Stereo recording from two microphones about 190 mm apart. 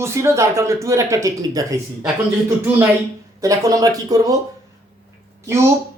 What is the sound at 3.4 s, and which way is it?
Speech, 15° right (ahead or behind).